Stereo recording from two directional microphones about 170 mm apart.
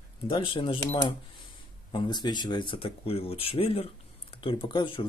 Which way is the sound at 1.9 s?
25° left (ahead or behind).